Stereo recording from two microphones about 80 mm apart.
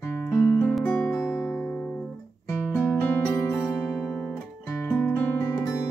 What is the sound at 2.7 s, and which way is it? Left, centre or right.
Music, left.